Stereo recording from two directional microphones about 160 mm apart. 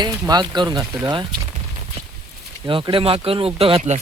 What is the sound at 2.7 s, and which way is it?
Speech, 30° right (ahead or behind).